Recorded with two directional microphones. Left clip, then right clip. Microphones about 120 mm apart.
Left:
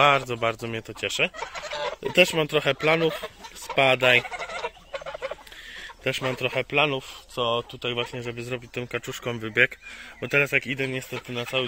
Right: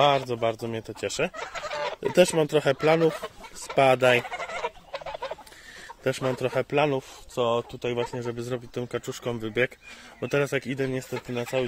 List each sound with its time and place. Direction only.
0.0 s speech: 20° right (ahead or behind)
0.8 s speech: 40° right (ahead or behind)
4.3 s goat: centre (ahead or behind)
4.9 s fowl: 40° left (ahead or behind)
6.0 s a man's voice: 50° right (ahead or behind); by 9.7 s 20° right (ahead or behind)
10.2 s a man's voice: 45° right (ahead or behind)